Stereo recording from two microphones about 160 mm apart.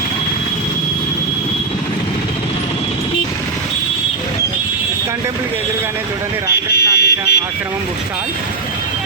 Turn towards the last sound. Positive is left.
turn(degrees=90)